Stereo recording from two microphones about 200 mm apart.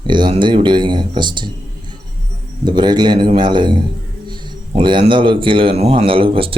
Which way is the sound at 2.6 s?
20° right (ahead or behind).